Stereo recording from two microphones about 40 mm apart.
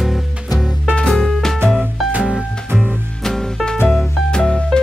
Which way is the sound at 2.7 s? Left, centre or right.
Centre.